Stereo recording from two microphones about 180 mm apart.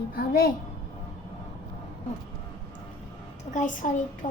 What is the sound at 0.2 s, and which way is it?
Speech, 55° left (ahead or behind).